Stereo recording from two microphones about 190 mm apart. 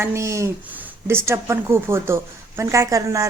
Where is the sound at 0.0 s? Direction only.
15° right (ahead or behind).